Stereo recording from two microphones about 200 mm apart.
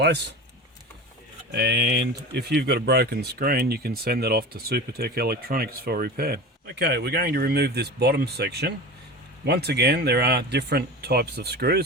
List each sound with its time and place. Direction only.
0.0 s speech: 60° right (ahead or behind)
1.5 s speech: 50° right (ahead or behind)